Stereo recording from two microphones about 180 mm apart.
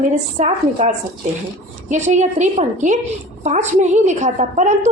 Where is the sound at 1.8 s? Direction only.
40° right (ahead or behind).